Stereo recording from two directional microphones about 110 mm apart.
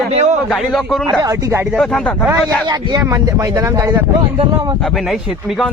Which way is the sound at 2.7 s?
35° right (ahead or behind).